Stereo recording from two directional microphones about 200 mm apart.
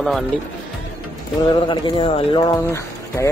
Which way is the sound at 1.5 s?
25° left (ahead or behind).